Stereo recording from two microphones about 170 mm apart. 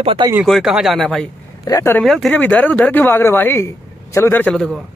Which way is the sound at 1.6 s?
15° left (ahead or behind).